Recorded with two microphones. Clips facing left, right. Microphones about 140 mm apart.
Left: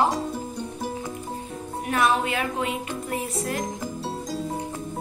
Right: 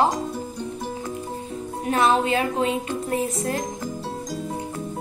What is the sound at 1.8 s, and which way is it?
A woman's voice, 30° right (ahead or behind).